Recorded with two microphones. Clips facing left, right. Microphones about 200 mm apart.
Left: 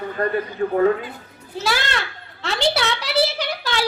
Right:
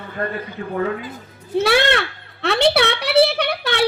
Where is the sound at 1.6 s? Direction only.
60° right (ahead or behind).